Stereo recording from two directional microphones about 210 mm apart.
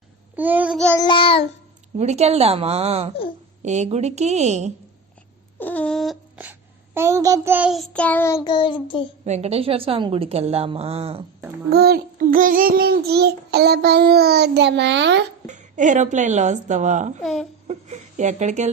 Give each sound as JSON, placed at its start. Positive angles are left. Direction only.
{"t": 0.3, "sound": "child singing", "side_deg": -10}
{"t": 0.9, "sound": "child singing", "side_deg": 20}
{"t": 2.0, "sound": "a woman's voice", "side_deg": -30}
{"t": 5.5, "sound": "speech", "side_deg": 10}
{"t": 9.2, "sound": "a woman's voice", "side_deg": -30}
{"t": 11.7, "sound": "child singing", "side_deg": -45}
{"t": 15.4, "sound": "a woman's voice", "side_deg": -35}